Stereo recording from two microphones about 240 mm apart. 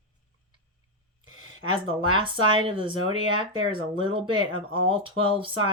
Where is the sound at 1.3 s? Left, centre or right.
Right.